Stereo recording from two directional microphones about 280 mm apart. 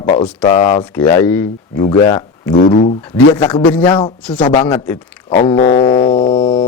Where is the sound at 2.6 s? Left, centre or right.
Left.